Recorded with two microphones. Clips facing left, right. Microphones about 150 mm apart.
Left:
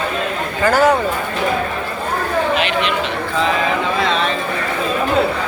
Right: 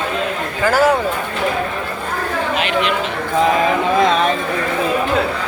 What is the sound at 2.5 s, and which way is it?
Chatter, 45° right (ahead or behind).